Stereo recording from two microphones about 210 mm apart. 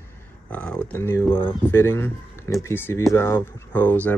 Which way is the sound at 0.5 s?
5° left (ahead or behind).